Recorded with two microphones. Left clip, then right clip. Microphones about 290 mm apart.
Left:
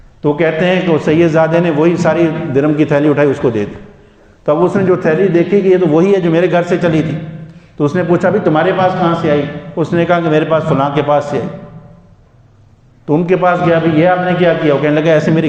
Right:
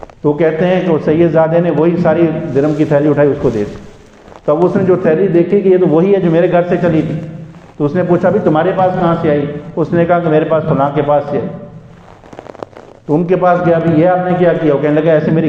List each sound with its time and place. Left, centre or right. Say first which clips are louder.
0.2 s a man's voice: right 1 dB; left
13.1 s a man's voice: even; left